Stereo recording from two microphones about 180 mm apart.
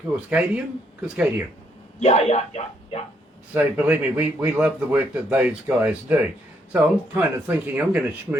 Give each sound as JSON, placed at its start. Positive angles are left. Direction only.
{"t": 0.3, "sound": "speech", "side_deg": -5}
{"t": 2.0, "sound": "speech", "side_deg": 35}
{"t": 3.5, "sound": "speech", "side_deg": -10}